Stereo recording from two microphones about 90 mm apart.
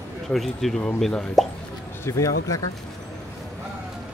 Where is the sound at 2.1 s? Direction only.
35° left (ahead or behind).